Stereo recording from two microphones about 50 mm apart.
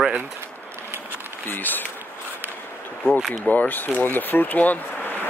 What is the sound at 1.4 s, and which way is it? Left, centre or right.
Speech, left.